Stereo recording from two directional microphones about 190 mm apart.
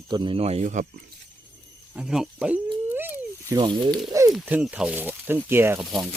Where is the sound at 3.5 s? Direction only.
25° right (ahead or behind).